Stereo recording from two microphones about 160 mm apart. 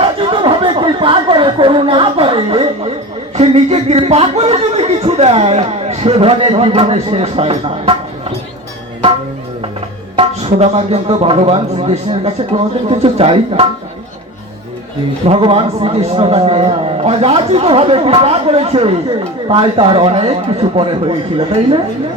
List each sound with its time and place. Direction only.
0.0 s chatter: 35° right (ahead or behind)
3.3 s speech: 40° right (ahead or behind)
10.2 s a man's voice: 40° right (ahead or behind)
15.3 s a man's voice: 35° right (ahead or behind)